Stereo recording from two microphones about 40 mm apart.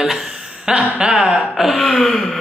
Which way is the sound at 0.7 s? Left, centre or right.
Right.